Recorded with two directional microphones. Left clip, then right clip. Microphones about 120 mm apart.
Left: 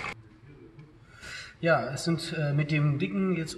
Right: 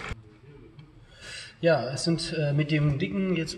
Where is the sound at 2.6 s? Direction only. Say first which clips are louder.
Right 2 dB; 35° right (ahead or behind).